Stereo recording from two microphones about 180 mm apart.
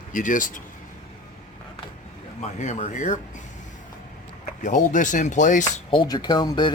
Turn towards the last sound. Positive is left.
turn(degrees=25)  # may be behind; listen again after turning